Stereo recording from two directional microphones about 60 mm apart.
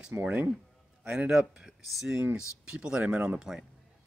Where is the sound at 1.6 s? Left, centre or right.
Centre.